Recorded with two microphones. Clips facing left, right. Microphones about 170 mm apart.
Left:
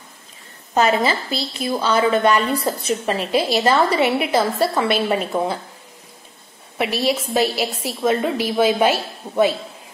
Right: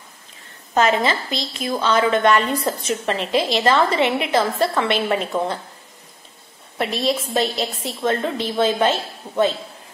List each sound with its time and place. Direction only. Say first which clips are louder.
1.3 s speech: left 2 dB; 35° left (ahead or behind)
1.7 s a woman's voice: left 1 dB; 10° left (ahead or behind)
2.6 s speech: left 1 dB; 35° left (ahead or behind)
3.1 s a woman's voice: even; 5° left (ahead or behind)
6.8 s a woman's voice: left 1 dB; 5° left (ahead or behind)